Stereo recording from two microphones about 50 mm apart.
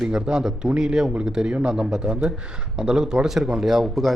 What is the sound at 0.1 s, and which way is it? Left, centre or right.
A man's voice, centre.